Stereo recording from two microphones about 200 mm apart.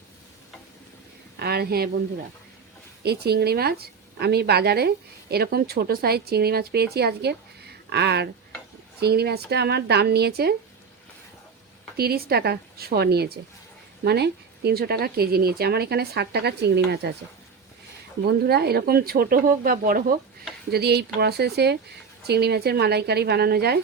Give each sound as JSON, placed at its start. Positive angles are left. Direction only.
{"t": 1.4, "sound": "a woman's voice", "side_deg": -50}
{"t": 3.0, "sound": "a woman's voice", "side_deg": -55}
{"t": 11.9, "sound": "a woman's voice", "side_deg": -50}
{"t": 18.3, "sound": "a woman's voice", "side_deg": -55}